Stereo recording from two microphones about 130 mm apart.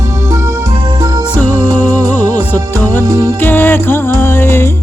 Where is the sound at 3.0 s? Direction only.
25° right (ahead or behind).